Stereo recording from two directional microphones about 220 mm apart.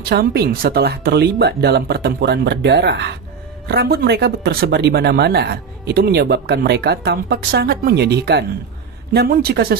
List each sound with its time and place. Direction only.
0.1 s speech: 45° right (ahead or behind)